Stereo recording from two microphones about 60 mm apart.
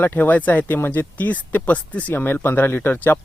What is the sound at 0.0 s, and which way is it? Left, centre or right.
Speech, left.